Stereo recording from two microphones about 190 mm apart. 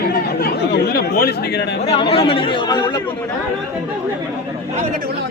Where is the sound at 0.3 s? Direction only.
55° left (ahead or behind).